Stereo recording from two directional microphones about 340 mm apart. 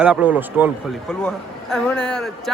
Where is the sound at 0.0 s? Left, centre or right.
Centre.